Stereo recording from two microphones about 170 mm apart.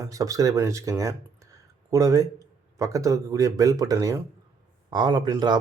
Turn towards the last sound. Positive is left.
turn(degrees=-25)  # may be behind; listen again after turning